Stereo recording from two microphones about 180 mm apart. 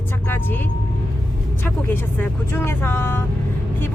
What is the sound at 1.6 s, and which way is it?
Speech, 10° left (ahead or behind).